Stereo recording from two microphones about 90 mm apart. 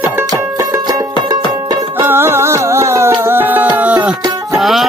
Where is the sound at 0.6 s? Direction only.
45° right (ahead or behind).